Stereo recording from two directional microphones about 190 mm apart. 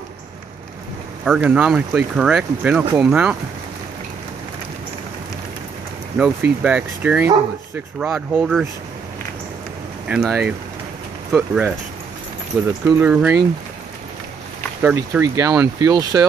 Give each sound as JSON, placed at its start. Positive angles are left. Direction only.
{"t": 1.2, "sound": "speech", "side_deg": -10}
{"t": 6.1, "sound": "speech", "side_deg": -5}
{"t": 10.0, "sound": "speech", "side_deg": -5}
{"t": 12.8, "sound": "speech", "side_deg": -10}
{"t": 14.8, "sound": "speech", "side_deg": -10}